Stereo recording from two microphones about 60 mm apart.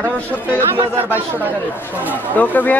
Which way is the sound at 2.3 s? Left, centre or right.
Left.